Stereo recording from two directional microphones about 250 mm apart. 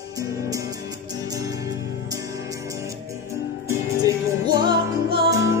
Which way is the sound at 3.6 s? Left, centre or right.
Centre.